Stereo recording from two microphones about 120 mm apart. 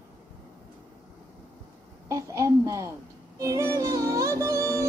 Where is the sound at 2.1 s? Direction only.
25° right (ahead or behind).